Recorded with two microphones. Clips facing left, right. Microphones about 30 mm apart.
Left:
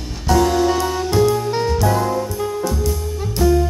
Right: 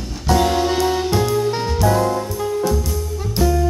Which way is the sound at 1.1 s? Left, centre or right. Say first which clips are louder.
Left 2 dB; centre.